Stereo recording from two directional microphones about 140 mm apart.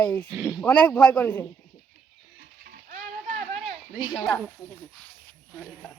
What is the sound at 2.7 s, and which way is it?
Music, 75° right (ahead or behind).